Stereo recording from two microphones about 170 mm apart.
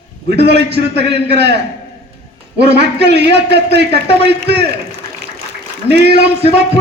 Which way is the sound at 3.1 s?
80° right.